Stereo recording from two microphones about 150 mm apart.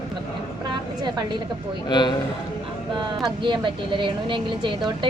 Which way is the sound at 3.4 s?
30° right (ahead or behind).